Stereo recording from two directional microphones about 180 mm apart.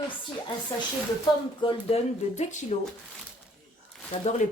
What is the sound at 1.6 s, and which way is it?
Speech, 35° left (ahead or behind).